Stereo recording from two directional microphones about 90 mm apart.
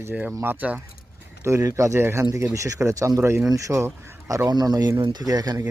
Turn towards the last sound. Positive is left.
turn(degrees=-45)  # may be behind; listen again after turning